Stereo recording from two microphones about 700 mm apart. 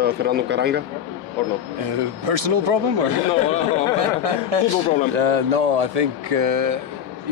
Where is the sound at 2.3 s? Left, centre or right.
Right.